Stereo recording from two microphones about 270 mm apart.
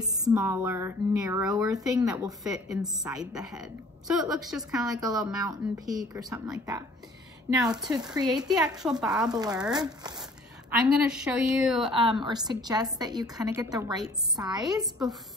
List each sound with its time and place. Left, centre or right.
0.0 s a woman's voice: centre
4.8 s a woman's voice: centre
9.3 s a woman's voice: centre
11.0 s a woman's voice: centre
11.9 s a woman's voice: centre
14.8 s a woman's voice: centre